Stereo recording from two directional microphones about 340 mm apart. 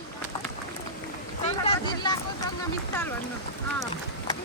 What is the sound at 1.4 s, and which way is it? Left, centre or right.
Vehicle, centre.